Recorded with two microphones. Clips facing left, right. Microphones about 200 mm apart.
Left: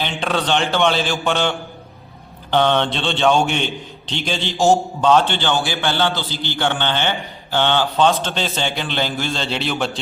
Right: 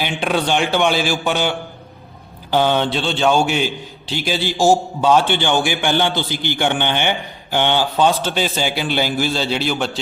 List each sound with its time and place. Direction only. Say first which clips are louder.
0.0 s a man's voice: right 2 dB; 10° right (ahead or behind)